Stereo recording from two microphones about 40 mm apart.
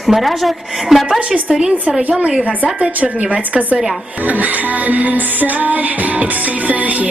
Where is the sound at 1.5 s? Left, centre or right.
Centre.